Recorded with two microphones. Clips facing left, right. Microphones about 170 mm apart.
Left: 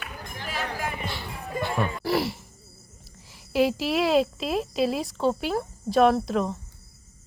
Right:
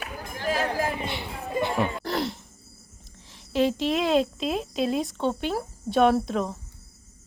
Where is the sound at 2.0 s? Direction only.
5° left (ahead or behind).